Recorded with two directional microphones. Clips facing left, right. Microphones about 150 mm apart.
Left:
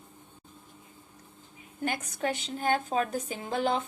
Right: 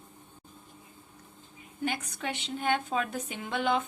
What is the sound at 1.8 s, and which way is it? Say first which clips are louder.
A woman's voice: left 2 dB; 45° left (ahead or behind).